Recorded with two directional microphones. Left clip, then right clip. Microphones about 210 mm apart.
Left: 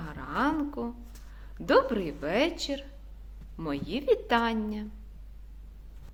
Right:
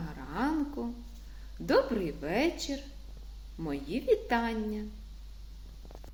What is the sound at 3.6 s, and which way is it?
A woman's voice, 15° left (ahead or behind).